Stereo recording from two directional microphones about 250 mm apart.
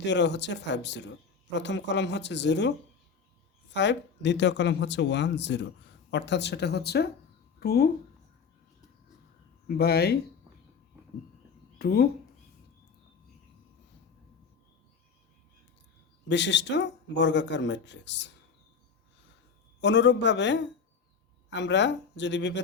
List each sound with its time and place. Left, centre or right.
0.0 s speech: left
9.6 s speech: left
11.8 s speech: left
16.3 s speech: left
19.8 s speech: left